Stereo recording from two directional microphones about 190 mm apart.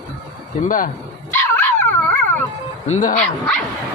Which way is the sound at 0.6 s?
45° left (ahead or behind).